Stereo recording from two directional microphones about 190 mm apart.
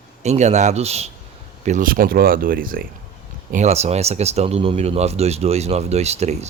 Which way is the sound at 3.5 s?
35° right (ahead or behind).